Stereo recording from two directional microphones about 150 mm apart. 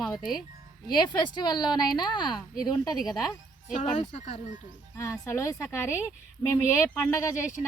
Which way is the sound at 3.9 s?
45° left (ahead or behind).